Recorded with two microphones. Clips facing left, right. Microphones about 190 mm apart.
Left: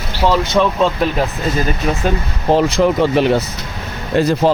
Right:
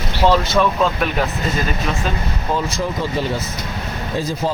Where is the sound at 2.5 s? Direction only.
70° left (ahead or behind).